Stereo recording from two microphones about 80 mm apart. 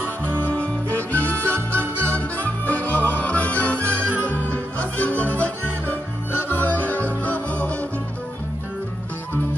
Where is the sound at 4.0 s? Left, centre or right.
Right.